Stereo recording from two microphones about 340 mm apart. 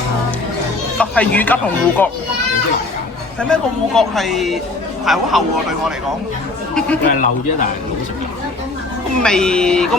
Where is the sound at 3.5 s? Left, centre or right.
Centre.